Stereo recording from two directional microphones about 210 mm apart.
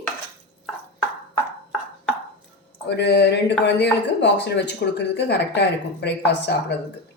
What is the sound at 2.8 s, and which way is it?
Speech, 50° left (ahead or behind).